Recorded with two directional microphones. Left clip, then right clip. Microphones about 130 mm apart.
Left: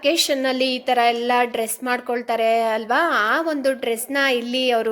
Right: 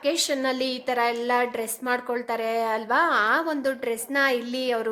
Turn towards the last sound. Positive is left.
turn(degrees=20)  # may be behind; listen again after turning